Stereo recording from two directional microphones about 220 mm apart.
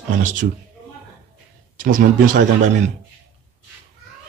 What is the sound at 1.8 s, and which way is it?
Speech, 35° right (ahead or behind).